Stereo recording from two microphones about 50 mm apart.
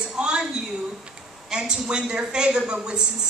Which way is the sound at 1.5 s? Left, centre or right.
Centre.